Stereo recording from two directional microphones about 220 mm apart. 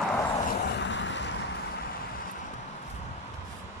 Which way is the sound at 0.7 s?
55° left (ahead or behind).